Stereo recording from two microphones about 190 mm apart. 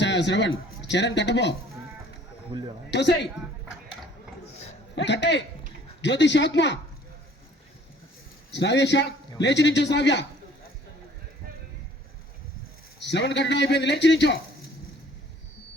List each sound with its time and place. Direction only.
0.0 s a man's voice: 70° left (ahead or behind)
2.5 s a man's voice: 25° right (ahead or behind)
2.9 s a man's voice: 65° left (ahead or behind)
4.9 s a man's voice: 65° left (ahead or behind)
8.5 s a man's voice: 65° left (ahead or behind)
13.0 s a man's voice: 65° left (ahead or behind)